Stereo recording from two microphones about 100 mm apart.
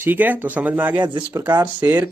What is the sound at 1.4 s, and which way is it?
Speech, 20° right (ahead or behind).